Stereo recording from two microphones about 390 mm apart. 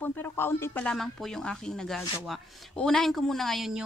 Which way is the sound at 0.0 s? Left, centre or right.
Centre.